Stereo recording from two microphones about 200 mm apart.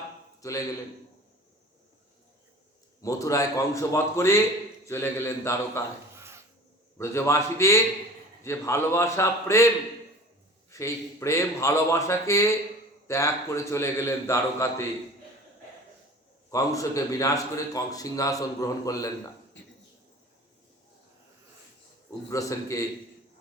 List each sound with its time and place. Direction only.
3.0 s a man's voice: 15° left (ahead or behind)
6.1 s wood: 15° right (ahead or behind)
7.0 s a man's voice: 15° left (ahead or behind)
10.7 s a man's voice: 15° left (ahead or behind)
16.5 s a man's voice: 15° left (ahead or behind)
19.6 s a sound: 65° left (ahead or behind)
22.3 s a man's voice: 15° left (ahead or behind)